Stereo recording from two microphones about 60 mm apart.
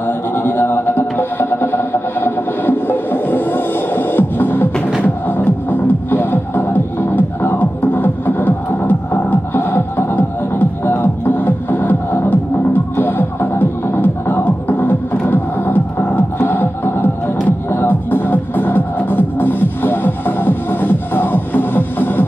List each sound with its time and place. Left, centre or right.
0.3 s music: left